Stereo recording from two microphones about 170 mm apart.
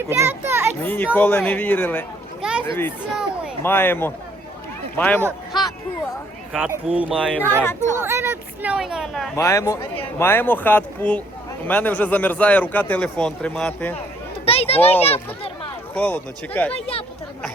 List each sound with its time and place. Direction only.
0.1 s a child's voice: 15° right (ahead or behind)
0.8 s a man's voice: 10° left (ahead or behind)
2.4 s a sound: 5° right (ahead or behind)
2.6 s a man's voice: 15° left (ahead or behind)
6.7 s speech: 10° right (ahead or behind)
7.3 s a man's voice: 10° left (ahead or behind)
8.0 s speech: 15° right (ahead or behind)
9.3 s a man's voice: 15° left (ahead or behind)
14.4 s children playing: 35° left (ahead or behind)
15.0 s speech: 35° left (ahead or behind)
16.0 s a man's voice: 10° left (ahead or behind)